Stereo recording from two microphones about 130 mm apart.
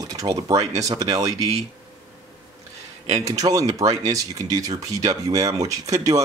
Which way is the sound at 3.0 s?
25° right (ahead or behind).